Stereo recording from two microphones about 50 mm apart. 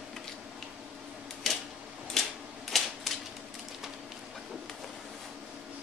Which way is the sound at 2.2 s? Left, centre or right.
Centre.